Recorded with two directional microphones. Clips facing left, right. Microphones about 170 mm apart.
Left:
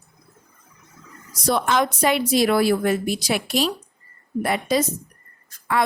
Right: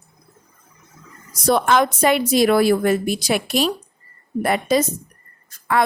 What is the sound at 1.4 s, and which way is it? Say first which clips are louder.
A woman's voice: right 4 dB; 55° right (ahead or behind).